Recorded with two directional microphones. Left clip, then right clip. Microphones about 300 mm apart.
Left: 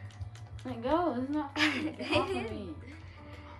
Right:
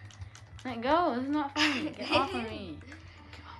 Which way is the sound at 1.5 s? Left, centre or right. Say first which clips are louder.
Left 1 dB; centre.